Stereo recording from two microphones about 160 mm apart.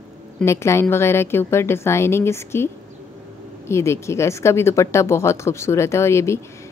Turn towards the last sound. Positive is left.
turn(degrees=15)  # may be behind; listen again after turning